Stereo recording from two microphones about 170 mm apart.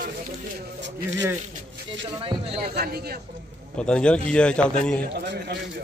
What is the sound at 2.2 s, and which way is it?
Speech, 35° right (ahead or behind).